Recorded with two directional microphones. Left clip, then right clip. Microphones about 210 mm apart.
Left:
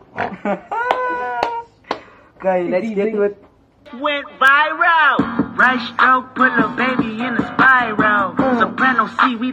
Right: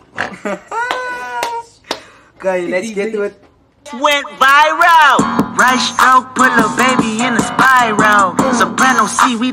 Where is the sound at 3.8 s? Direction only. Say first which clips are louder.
Right 7 dB; 55° right (ahead or behind).